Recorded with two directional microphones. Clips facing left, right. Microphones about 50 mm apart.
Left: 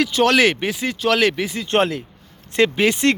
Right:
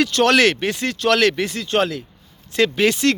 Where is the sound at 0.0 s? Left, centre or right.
Centre.